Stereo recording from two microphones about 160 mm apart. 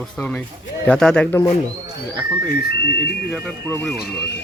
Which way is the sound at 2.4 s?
90° left.